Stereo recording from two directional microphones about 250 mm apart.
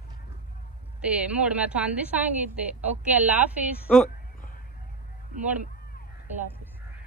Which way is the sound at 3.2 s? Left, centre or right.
Centre.